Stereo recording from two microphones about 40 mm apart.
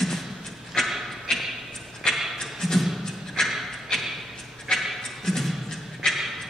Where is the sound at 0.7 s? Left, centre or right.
Left.